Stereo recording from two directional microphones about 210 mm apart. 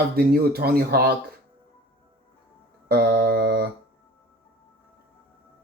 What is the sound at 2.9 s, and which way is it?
Speech, 50° right (ahead or behind).